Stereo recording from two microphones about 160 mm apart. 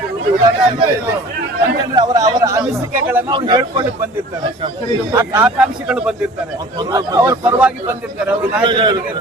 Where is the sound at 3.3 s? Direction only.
30° right (ahead or behind).